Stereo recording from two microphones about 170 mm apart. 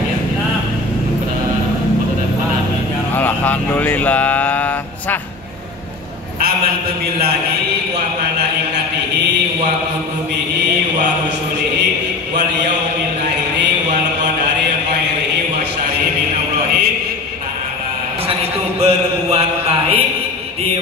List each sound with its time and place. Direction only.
3.2 s speech: 10° left (ahead or behind)
18.8 s mantra: 35° right (ahead or behind)